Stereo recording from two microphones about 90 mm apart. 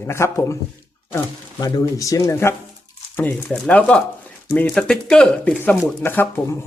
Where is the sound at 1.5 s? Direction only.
45° left (ahead or behind); by 3.5 s 25° left (ahead or behind).